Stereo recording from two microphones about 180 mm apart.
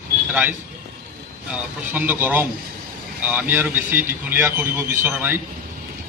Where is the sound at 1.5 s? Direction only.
10° right (ahead or behind).